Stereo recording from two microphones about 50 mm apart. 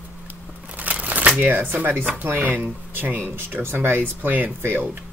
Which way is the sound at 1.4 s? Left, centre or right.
Right.